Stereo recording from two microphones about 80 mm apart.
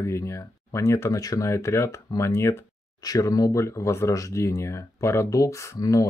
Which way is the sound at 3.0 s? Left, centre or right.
Left.